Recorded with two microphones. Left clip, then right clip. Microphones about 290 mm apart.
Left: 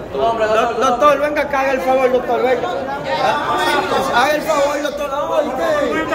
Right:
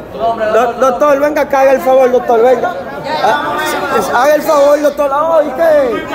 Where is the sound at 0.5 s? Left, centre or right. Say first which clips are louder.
Right 4 dB; right.